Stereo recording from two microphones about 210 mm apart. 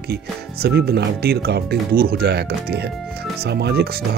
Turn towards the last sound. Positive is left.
turn(degrees=-50)  # may be behind; listen again after turning